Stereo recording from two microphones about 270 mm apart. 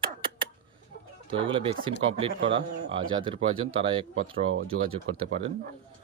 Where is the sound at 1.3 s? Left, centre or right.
Centre.